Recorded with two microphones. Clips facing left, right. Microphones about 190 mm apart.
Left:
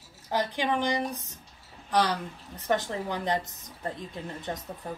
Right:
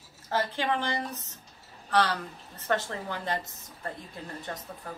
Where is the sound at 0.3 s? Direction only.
15° left (ahead or behind).